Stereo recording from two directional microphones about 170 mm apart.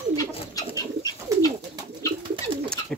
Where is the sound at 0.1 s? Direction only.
20° left (ahead or behind).